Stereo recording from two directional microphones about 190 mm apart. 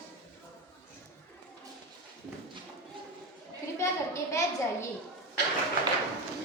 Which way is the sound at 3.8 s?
15° left (ahead or behind).